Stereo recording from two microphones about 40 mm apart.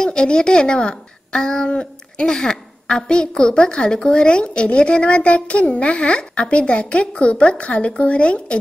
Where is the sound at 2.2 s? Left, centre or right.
Centre.